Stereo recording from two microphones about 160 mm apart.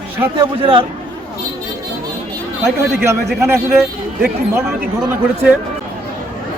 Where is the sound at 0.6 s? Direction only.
30° right (ahead or behind).